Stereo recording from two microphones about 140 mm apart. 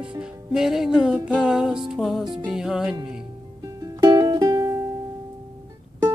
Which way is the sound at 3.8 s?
30° right (ahead or behind).